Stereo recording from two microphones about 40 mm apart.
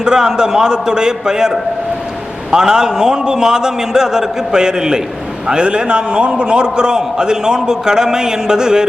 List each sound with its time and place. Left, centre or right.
0.0 s a man's voice: centre